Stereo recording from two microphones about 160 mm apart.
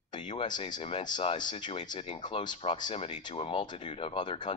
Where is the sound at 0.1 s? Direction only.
30° left (ahead or behind).